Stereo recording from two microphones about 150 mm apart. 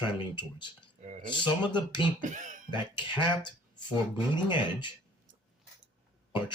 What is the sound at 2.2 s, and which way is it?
Speech, 60° right (ahead or behind).